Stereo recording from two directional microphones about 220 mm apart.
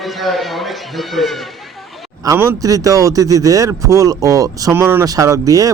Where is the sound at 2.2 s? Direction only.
10° right (ahead or behind).